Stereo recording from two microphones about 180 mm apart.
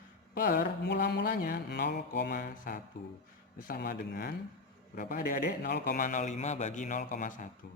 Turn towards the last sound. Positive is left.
turn(degrees=45)  # may be behind; listen again after turning